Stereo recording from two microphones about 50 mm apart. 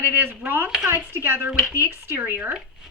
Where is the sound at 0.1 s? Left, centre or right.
Right.